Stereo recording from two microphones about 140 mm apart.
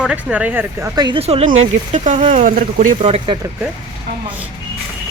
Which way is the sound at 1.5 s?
55° right (ahead or behind).